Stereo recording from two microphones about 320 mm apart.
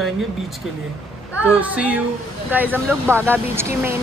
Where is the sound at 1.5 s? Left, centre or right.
Centre.